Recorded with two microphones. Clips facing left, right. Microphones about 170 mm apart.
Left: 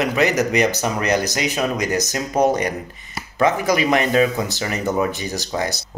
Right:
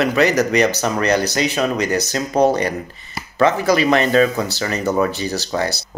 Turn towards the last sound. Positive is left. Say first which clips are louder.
# right 3 dB
turn(degrees=15)  # may be behind; listen again after turning